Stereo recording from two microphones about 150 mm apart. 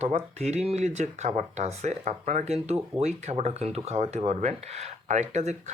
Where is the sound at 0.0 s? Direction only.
45° right (ahead or behind).